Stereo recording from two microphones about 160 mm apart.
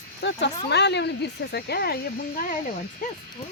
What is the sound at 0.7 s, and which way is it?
Speech, 90° left.